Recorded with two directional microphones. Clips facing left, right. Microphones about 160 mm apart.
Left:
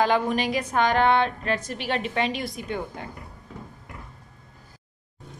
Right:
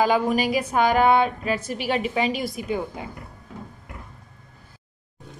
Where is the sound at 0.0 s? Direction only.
5° right (ahead or behind).